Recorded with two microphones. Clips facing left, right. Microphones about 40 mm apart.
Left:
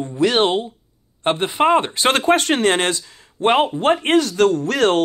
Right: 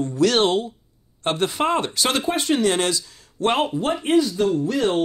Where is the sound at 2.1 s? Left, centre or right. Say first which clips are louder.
Left 6 dB; left.